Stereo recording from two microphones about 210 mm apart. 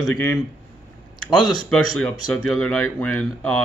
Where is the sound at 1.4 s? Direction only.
Centre (ahead or behind).